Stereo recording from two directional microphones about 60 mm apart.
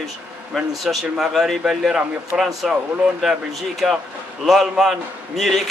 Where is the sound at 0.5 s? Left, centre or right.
Centre.